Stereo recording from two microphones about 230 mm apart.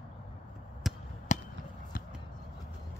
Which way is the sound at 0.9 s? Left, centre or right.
Centre.